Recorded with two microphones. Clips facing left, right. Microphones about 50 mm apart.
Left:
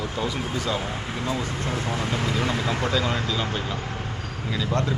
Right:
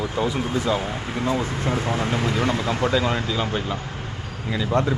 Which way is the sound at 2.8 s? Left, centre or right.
Centre.